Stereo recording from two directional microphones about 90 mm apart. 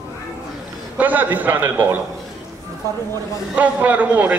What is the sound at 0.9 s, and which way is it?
A man's voice, 20° right (ahead or behind).